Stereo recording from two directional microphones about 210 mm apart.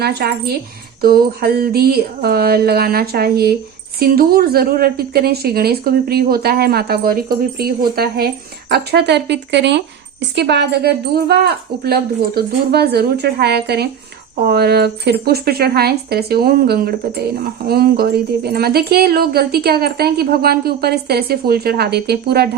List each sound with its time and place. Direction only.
0.0 s speech: 50° right (ahead or behind)